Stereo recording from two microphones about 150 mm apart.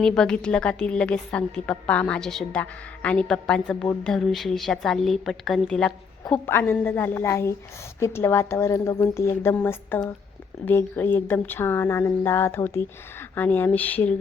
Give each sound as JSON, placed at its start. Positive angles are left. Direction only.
{"t": 0.0, "sound": "a woman's voice", "side_deg": 5}